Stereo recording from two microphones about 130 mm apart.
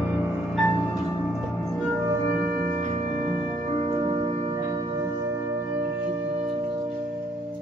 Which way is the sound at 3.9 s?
40° right (ahead or behind).